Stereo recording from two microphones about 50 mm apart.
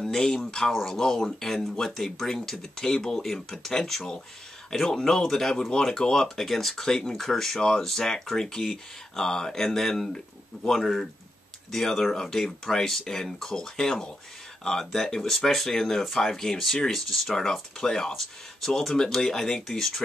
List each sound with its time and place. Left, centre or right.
0.0 s speech: centre